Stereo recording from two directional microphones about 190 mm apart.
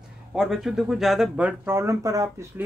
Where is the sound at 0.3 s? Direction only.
Centre (ahead or behind).